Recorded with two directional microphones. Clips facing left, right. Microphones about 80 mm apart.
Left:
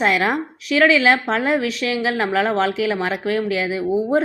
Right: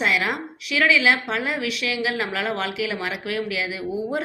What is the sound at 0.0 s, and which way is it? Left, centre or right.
A woman's voice, left.